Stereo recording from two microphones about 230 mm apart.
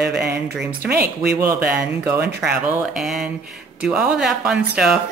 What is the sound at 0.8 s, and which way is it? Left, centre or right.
Speech, right.